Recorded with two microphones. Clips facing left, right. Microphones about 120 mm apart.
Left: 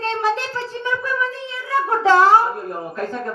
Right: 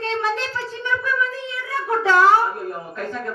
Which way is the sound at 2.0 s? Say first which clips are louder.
Left 3 dB; 30° left (ahead or behind).